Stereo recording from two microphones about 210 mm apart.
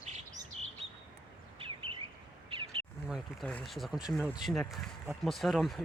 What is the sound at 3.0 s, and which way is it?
Speech, centre (ahead or behind).